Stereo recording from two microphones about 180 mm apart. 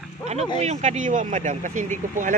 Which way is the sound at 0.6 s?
40° right (ahead or behind).